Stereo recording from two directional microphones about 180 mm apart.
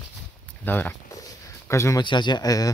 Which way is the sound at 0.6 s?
10° left (ahead or behind).